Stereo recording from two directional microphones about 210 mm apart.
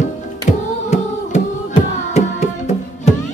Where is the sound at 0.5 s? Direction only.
35° left (ahead or behind).